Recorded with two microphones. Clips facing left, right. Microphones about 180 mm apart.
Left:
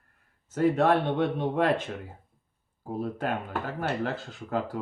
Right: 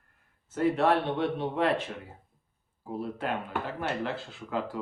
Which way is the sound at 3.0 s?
45° left (ahead or behind).